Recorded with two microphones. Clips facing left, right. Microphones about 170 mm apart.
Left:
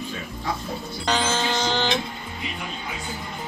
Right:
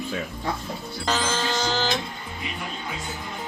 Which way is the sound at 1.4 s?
Centre (ahead or behind).